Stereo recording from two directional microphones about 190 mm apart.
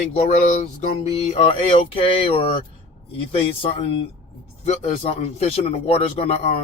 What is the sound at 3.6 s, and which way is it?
Speech, 30° left (ahead or behind).